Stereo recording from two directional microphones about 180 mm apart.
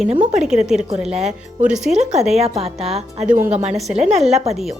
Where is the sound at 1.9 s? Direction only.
40° right (ahead or behind).